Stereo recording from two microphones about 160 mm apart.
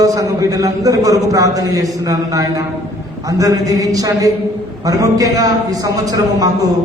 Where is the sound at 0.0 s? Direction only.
20° right (ahead or behind).